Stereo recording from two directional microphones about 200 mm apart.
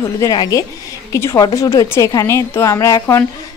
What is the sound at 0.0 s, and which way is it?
A woman's voice, 15° left (ahead or behind).